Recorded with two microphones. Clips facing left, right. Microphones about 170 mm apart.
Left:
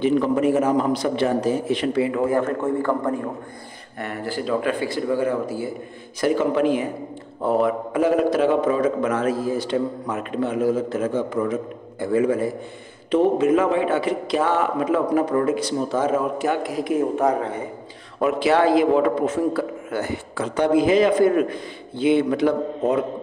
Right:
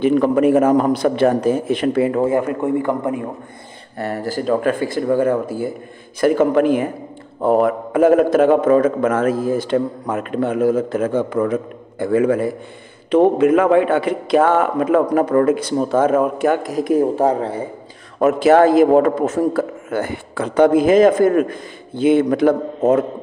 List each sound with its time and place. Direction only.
0.0 s a man's voice: 55° right (ahead or behind)
2.3 s a man's voice: 15° right (ahead or behind)
4.0 s a man's voice: 40° right (ahead or behind)
18.2 s a man's voice: 45° right (ahead or behind)